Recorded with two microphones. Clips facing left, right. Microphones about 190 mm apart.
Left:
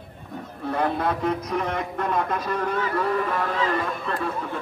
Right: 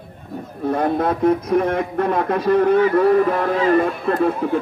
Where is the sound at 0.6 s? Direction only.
45° right (ahead or behind).